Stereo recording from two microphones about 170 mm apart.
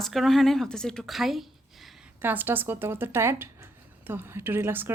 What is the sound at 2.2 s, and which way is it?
Speech, 10° right (ahead or behind).